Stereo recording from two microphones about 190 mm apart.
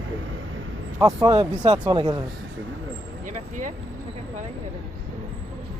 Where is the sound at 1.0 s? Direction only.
20° right (ahead or behind).